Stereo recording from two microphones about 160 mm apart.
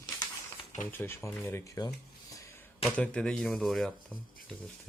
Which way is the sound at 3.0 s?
5° left (ahead or behind).